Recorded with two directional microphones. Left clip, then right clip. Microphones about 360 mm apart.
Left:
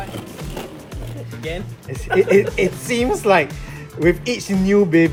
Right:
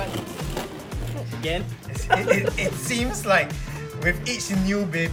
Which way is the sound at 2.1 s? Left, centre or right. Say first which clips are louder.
Left 5 dB; right.